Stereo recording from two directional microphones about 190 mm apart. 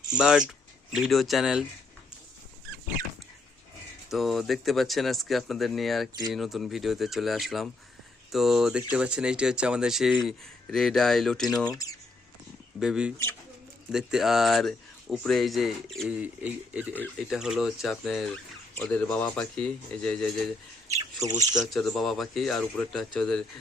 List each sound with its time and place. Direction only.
0.2 s speech: 5° right (ahead or behind)
4.1 s speech: centre (ahead or behind)
11.7 s speech: 20° left (ahead or behind)
12.8 s speech: 5° right (ahead or behind)
20.8 s speech: 15° right (ahead or behind)
21.7 s speech: centre (ahead or behind)